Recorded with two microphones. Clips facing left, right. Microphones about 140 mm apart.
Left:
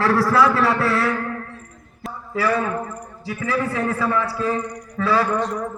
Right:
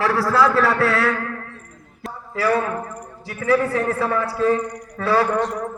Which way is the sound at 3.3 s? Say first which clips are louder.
Right 4 dB; 55° right (ahead or behind).